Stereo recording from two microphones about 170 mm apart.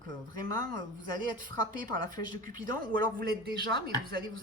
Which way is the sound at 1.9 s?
50° right (ahead or behind).